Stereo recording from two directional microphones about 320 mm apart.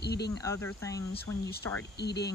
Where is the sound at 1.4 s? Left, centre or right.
Left.